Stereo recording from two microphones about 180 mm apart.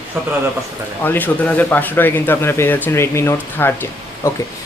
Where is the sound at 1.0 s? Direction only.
10° left (ahead or behind).